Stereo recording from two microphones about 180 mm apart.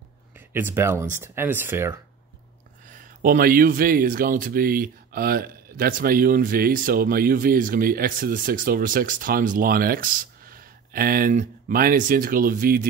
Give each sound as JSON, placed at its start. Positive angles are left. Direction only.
{"t": 0.5, "sound": "speech", "side_deg": -10}
{"t": 2.9, "sound": "speech", "side_deg": -50}